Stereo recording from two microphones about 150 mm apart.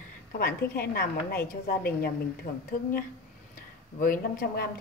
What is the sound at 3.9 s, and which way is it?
Speech, 70° left (ahead or behind).